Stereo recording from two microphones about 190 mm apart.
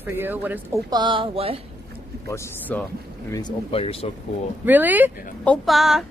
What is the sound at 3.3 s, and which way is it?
Speech, 25° left (ahead or behind).